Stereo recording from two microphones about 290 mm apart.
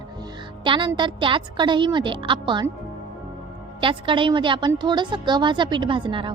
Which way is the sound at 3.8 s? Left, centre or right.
Centre.